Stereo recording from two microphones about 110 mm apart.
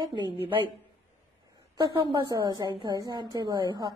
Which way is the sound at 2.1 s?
40° right (ahead or behind).